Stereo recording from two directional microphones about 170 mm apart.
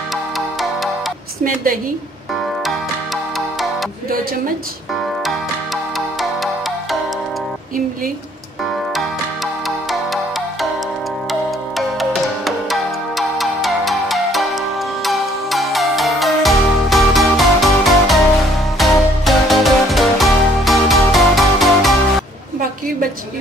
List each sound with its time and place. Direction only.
0.1 s music: centre (ahead or behind)
1.4 s a woman's voice: 55° right (ahead or behind)
5.9 s music: centre (ahead or behind)
8.9 s music: centre (ahead or behind)